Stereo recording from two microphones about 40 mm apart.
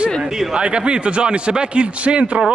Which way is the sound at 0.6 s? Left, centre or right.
Right.